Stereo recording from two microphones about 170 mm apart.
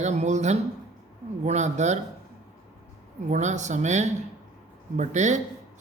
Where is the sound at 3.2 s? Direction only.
45° right (ahead or behind).